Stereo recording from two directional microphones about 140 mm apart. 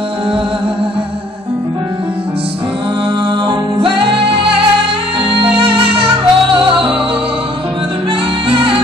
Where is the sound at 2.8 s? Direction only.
35° right (ahead or behind).